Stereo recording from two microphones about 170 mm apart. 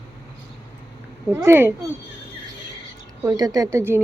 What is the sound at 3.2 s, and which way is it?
Speech, 20° right (ahead or behind).